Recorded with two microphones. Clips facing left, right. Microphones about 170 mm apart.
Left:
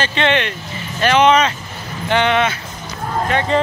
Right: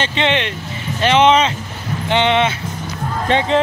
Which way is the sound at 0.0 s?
20° right (ahead or behind).